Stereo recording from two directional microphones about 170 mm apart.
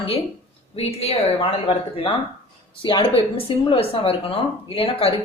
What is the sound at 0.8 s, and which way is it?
Speech, 35° left (ahead or behind).